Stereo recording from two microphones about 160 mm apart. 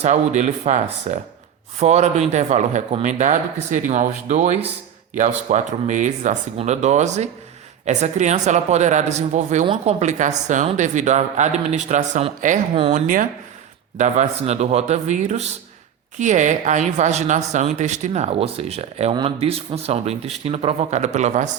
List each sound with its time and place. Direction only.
0.0 s a woman's voice: 50° right (ahead or behind)